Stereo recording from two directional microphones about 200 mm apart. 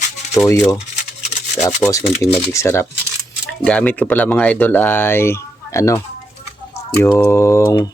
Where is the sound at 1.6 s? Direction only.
15° left (ahead or behind).